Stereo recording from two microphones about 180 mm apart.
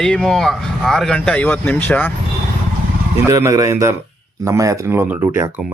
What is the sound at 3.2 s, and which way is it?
Speech, 15° right (ahead or behind).